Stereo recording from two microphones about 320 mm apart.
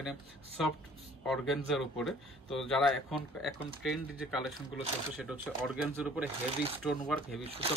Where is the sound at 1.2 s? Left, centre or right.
Centre.